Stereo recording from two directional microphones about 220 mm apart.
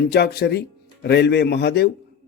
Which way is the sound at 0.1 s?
45° left (ahead or behind).